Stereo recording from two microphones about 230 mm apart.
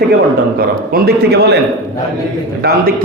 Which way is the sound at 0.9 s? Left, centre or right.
Right.